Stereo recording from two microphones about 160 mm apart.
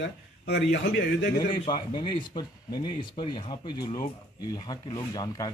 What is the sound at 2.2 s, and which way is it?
Speech, 30° left (ahead or behind).